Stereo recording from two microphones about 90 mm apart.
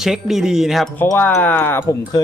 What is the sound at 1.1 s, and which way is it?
Speech, 20° left (ahead or behind).